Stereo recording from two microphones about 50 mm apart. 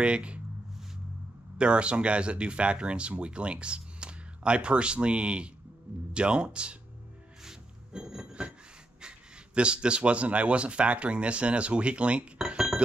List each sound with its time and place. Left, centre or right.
0.0 s speech: right
1.6 s speech: right
7.4 s music: centre
9.0 s speech: right